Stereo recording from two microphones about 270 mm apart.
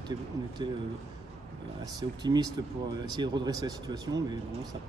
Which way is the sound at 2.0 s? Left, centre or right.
Centre.